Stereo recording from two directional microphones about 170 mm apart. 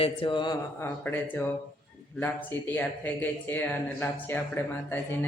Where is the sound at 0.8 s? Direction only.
10° left (ahead or behind).